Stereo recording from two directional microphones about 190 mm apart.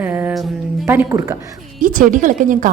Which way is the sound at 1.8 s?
45° right (ahead or behind).